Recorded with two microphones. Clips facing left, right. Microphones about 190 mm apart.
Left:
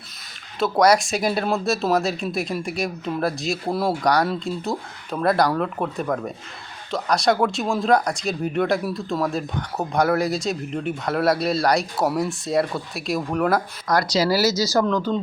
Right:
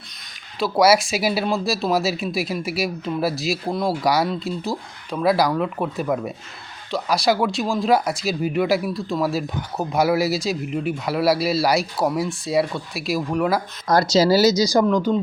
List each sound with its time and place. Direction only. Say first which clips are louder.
0.6 s speech: right 1 dB; 5° right (ahead or behind)
13.8 s speech: right 6 dB; 25° right (ahead or behind)